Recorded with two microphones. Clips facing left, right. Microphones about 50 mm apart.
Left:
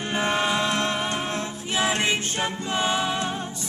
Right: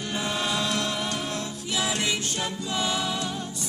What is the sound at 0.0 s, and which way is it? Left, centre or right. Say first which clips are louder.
Music: left 5 dB; left.